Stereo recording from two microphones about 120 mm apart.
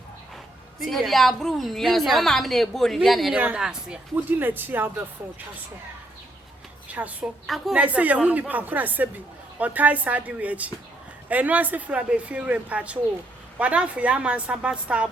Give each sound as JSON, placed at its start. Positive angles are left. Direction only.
{"t": 0.8, "sound": "a woman's voice", "side_deg": 0}
{"t": 3.3, "sound": "speech", "side_deg": -10}
{"t": 6.8, "sound": "a woman's voice", "side_deg": -10}
{"t": 7.4, "sound": "a woman's voice", "side_deg": 0}
{"t": 7.8, "sound": "speech", "side_deg": -10}